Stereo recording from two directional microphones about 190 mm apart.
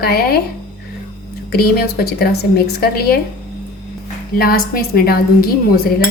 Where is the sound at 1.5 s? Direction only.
55° left (ahead or behind).